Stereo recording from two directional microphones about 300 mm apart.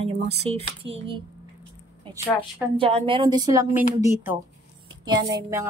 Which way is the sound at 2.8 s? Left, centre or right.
Centre.